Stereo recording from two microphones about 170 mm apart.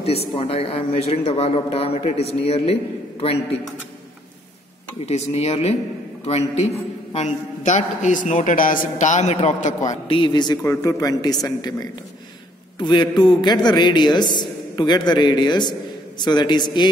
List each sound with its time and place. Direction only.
0.0 s a man's voice: 35° left (ahead or behind)
5.0 s a man's voice: 35° left (ahead or behind)
10.0 s a man's voice: 30° left (ahead or behind)
12.7 s a man's voice: 25° left (ahead or behind)